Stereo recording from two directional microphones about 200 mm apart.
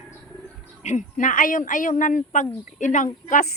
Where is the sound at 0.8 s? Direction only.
35° left (ahead or behind).